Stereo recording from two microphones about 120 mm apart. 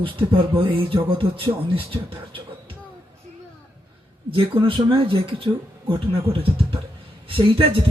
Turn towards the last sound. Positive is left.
turn(degrees=-45)  # may be behind; listen again after turning